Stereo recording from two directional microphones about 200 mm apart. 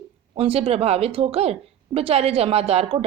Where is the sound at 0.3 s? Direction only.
30° right (ahead or behind).